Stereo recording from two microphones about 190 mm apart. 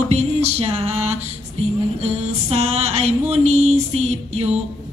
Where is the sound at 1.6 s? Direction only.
35° right (ahead or behind).